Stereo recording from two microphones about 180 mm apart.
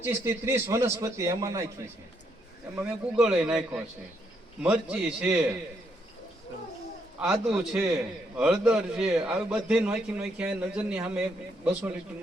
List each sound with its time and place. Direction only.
0.0 s a man's voice: 15° right (ahead or behind)
2.7 s a man's voice: 5° right (ahead or behind)
7.2 s a man's voice: 5° right (ahead or behind)